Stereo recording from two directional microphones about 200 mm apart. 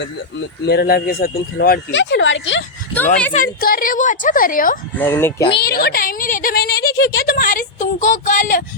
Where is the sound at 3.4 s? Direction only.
45° left (ahead or behind).